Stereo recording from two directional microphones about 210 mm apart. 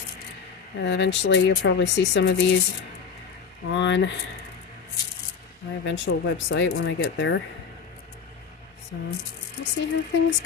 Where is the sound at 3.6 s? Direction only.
60° left (ahead or behind).